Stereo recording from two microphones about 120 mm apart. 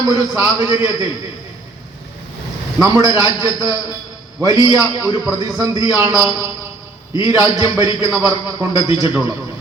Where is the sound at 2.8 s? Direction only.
30° right (ahead or behind).